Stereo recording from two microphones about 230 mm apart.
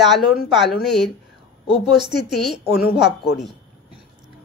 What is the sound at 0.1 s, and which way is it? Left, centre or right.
A woman's voice, centre.